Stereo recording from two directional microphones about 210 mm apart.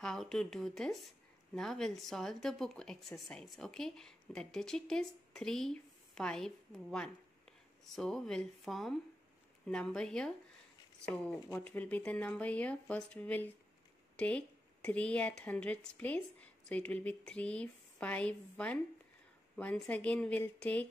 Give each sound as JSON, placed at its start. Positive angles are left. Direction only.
{"t": 0.0, "sound": "speech", "side_deg": 0}
{"t": 11.5, "sound": "speech", "side_deg": 5}